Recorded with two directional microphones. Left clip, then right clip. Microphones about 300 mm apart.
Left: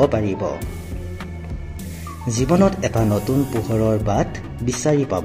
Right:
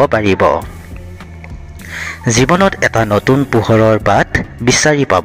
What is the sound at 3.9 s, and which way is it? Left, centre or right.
Speech, right.